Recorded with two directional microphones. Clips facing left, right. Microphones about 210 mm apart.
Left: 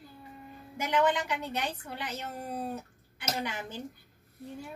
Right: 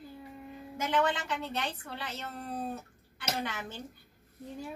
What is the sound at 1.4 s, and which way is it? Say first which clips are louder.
Speech: left 1 dB; 10° left (ahead or behind).